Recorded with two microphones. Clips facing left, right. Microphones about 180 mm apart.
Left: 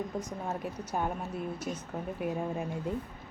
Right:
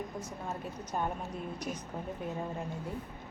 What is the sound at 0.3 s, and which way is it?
Speech, 10° left (ahead or behind).